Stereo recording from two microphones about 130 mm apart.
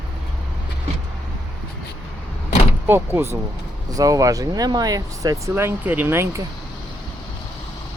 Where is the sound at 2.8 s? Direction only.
15° right (ahead or behind).